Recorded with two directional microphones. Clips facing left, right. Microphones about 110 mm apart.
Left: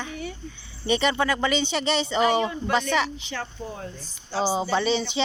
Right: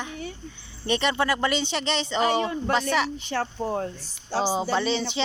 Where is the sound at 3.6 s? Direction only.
60° right (ahead or behind).